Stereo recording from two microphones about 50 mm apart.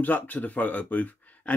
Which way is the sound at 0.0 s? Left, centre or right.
Left.